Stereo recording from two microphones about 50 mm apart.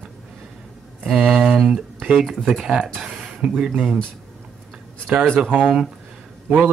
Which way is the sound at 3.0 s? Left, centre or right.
Centre.